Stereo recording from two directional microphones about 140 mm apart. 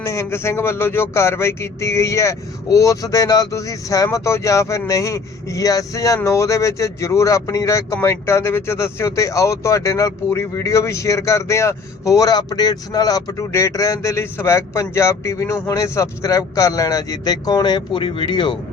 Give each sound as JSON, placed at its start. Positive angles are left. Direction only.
{"t": 0.0, "sound": "speech", "side_deg": 20}